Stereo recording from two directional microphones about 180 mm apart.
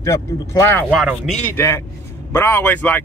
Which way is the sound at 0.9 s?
Centre (ahead or behind).